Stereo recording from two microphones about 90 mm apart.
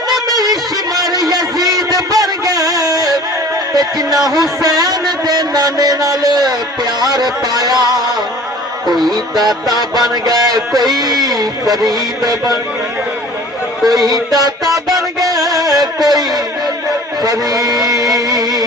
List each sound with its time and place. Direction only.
0.3 s a sound: 45° right (ahead or behind)
3.8 s music: 45° right (ahead or behind)
4.3 s a man's voice: 50° right (ahead or behind)
8.9 s speech: centre (ahead or behind)
9.1 s a man's voice: 50° right (ahead or behind)
14.3 s a man's voice: 45° right (ahead or behind)
14.9 s music: 45° right (ahead or behind)